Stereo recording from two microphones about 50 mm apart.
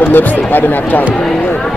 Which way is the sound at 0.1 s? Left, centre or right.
Left.